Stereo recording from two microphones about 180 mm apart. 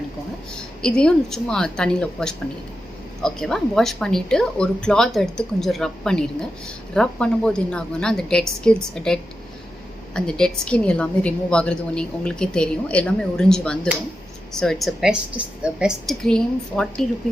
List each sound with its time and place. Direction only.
0.8 s a woman's voice: 5° left (ahead or behind)
10.2 s a woman's voice: 5° left (ahead or behind)